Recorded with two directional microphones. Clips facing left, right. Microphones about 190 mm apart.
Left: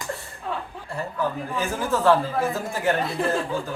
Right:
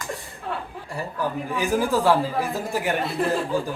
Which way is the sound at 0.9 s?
15° right (ahead or behind).